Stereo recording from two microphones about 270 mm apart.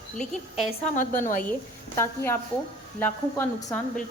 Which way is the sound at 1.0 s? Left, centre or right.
Left.